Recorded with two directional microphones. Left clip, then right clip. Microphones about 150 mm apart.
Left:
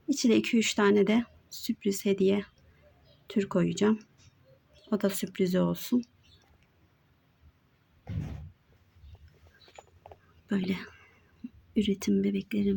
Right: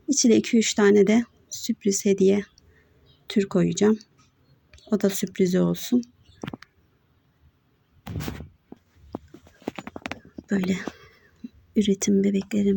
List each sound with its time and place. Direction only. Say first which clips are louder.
0.1 s speech: right 6 dB; 15° right (ahead or behind)
10.4 s whispering: right 6 dB; 10° right (ahead or behind)
11.7 s speech: right 7 dB; 20° right (ahead or behind)